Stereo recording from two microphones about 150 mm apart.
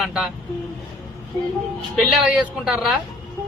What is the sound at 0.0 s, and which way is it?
Speech, 5° right (ahead or behind).